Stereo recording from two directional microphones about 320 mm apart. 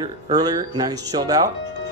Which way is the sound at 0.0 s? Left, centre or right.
Centre.